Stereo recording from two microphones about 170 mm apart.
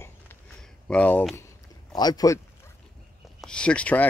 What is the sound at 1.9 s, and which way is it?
Speech, 25° left (ahead or behind).